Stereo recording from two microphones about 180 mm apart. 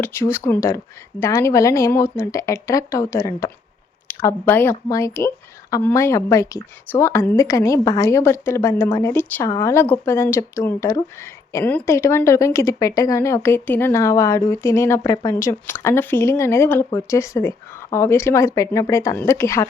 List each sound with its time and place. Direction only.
0.0 s speech: 15° left (ahead or behind)